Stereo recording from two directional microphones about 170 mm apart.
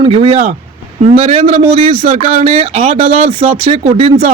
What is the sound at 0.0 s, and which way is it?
Speech, 35° right (ahead or behind).